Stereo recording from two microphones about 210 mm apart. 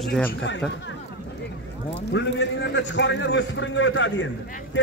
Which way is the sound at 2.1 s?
55° left (ahead or behind).